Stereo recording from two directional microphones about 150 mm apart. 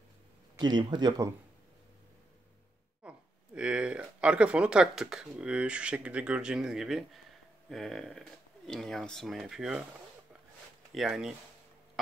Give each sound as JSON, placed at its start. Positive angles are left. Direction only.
{"t": 0.6, "sound": "speech", "side_deg": -30}
{"t": 3.0, "sound": "speech", "side_deg": -5}
{"t": 10.9, "sound": "speech", "side_deg": 0}